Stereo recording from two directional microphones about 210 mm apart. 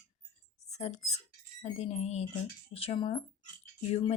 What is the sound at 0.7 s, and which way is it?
Speech, 30° left (ahead or behind).